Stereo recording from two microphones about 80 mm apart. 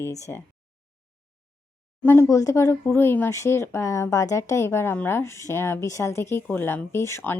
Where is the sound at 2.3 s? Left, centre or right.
Left.